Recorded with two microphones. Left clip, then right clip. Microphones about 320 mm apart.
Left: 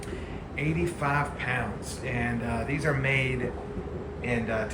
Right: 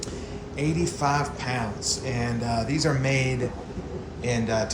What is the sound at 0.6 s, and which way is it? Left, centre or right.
Speech, centre.